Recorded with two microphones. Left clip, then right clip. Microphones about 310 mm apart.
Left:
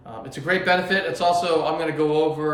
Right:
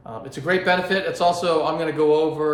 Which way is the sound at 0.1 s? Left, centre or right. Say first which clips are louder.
Right 1 dB; centre.